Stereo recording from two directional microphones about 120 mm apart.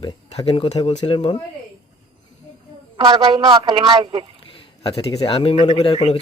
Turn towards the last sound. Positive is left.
turn(degrees=55)  # may be behind; listen again after turning